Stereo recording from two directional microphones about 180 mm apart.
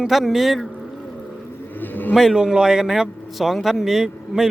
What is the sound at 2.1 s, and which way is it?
Speech, centre (ahead or behind).